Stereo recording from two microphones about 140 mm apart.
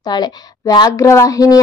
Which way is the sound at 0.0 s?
30° left (ahead or behind).